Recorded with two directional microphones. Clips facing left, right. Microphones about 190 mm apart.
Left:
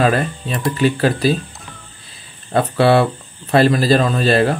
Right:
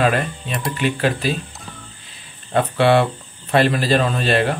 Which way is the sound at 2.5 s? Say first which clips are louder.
Left 2 dB; 35° left (ahead or behind).